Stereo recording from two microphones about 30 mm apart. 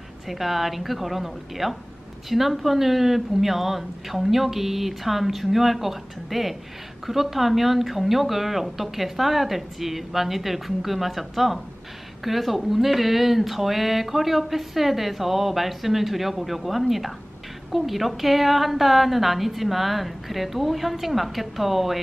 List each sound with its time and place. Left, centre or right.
0.3 s speech: centre